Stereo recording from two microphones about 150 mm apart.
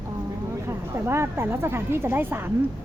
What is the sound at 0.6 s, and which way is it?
A woman's voice, 15° right (ahead or behind).